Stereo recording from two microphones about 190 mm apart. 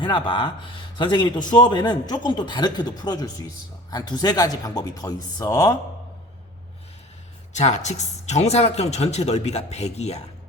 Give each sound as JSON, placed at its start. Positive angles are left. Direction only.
{"t": 0.0, "sound": "a man's voice", "side_deg": 25}
{"t": 7.5, "sound": "a woman's voice", "side_deg": 35}